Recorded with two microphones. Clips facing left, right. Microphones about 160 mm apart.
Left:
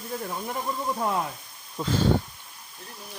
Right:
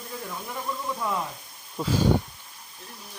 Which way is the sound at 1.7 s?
5° right (ahead or behind).